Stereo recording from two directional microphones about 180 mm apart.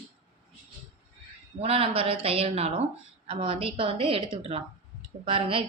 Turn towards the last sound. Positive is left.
turn(degrees=-30)  # may be behind; listen again after turning